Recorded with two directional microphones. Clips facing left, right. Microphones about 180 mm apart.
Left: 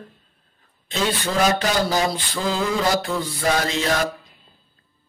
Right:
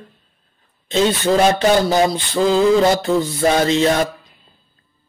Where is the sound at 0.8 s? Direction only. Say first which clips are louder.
Right 8 dB; 25° right (ahead or behind).